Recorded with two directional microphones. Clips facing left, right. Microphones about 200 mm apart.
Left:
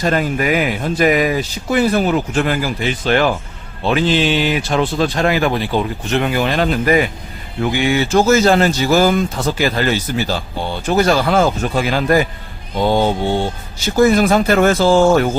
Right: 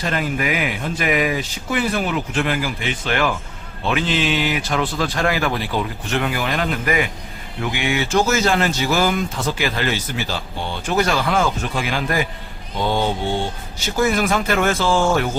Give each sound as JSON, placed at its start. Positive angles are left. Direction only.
{"t": 0.0, "sound": "speech", "side_deg": 40}
{"t": 14.0, "sound": "speech", "side_deg": 35}